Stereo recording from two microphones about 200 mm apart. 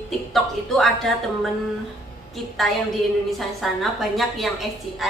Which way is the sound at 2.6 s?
Centre (ahead or behind).